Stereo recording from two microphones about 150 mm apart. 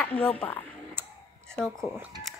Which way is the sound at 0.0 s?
10° left (ahead or behind).